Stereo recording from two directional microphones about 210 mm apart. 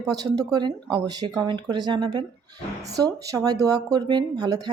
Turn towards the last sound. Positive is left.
turn(degrees=-20)  # may be behind; listen again after turning